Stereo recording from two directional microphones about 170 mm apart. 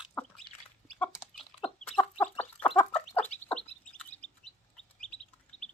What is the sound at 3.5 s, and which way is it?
Bird, 5° left (ahead or behind).